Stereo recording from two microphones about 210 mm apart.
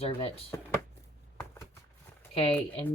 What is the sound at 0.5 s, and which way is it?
Speech, 15° left (ahead or behind).